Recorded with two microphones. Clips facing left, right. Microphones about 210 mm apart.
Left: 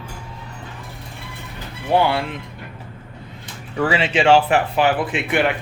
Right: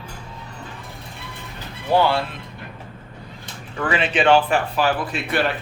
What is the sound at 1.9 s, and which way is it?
Speech, 20° left (ahead or behind).